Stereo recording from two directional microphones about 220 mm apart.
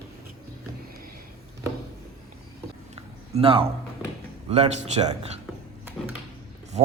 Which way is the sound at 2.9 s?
25° right (ahead or behind).